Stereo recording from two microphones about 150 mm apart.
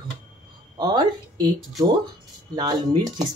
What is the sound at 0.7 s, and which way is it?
Speech, 30° right (ahead or behind).